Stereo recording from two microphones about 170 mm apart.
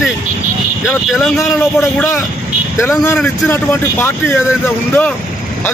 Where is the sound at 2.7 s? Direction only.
15° left (ahead or behind).